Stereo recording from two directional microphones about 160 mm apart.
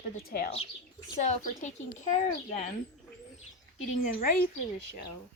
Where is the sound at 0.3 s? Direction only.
70° left (ahead or behind).